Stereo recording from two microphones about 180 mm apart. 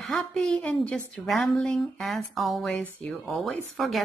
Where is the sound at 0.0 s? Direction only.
5° left (ahead or behind).